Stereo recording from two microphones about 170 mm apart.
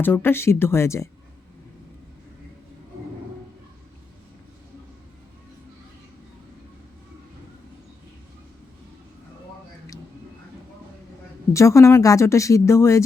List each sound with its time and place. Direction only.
0.0 s a woman's voice: 10° left (ahead or behind)
11.5 s a woman's voice: 15° left (ahead or behind)